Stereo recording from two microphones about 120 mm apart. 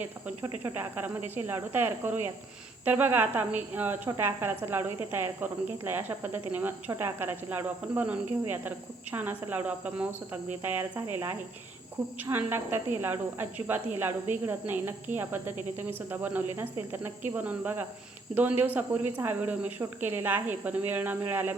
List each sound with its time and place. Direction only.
0.6 s a woman's voice: 15° right (ahead or behind)